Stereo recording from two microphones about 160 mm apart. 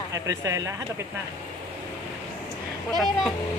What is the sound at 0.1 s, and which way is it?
Speech, 20° right (ahead or behind).